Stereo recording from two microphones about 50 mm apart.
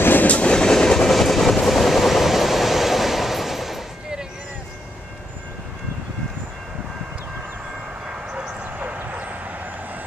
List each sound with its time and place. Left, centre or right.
0.0 s train: left
0.3 s train: left; by 3.8 s centre
8.1 s vehicle: right
8.6 s bow-wow: right